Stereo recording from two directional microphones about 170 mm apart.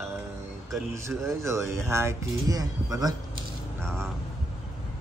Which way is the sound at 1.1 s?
15° right (ahead or behind).